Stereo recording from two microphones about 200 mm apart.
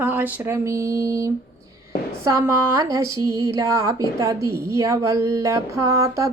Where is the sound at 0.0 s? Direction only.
10° right (ahead or behind).